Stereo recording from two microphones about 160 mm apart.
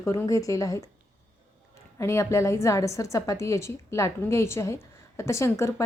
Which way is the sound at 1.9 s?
20° left (ahead or behind).